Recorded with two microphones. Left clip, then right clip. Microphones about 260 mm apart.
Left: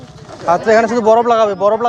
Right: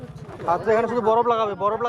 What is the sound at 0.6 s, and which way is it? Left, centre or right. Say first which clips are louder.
Speech: left 9 dB; left.